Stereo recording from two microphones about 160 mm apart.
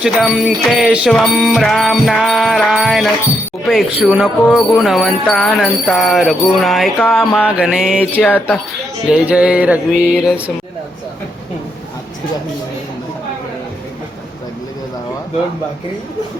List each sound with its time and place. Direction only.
0.0 s jingle bell: 5° right (ahead or behind)
8.2 s speech: 10° left (ahead or behind)
9.1 s a sound: 5° right (ahead or behind)